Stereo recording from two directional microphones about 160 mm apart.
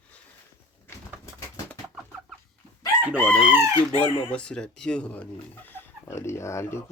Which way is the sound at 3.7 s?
25° right (ahead or behind).